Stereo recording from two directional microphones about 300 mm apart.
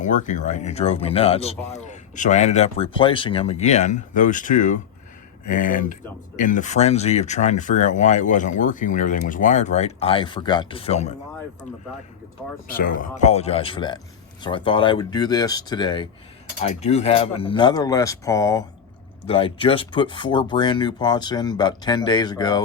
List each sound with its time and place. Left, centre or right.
0.0 s speech: left
12.6 s speech: left; by 22.6 s centre